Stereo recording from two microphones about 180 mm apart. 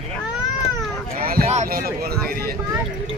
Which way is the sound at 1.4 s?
40° right (ahead or behind).